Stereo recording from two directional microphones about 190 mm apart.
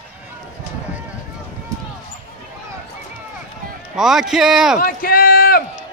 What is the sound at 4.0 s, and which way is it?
Speech, centre (ahead or behind).